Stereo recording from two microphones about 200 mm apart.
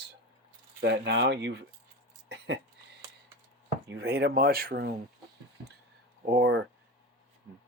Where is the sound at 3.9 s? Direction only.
55° right (ahead or behind).